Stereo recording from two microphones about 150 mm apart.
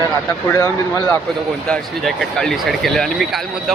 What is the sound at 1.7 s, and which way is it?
Speech, 5° left (ahead or behind).